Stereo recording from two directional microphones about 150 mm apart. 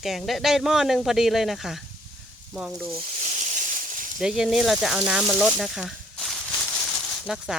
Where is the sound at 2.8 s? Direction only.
40° right (ahead or behind); by 4.1 s 65° right (ahead or behind).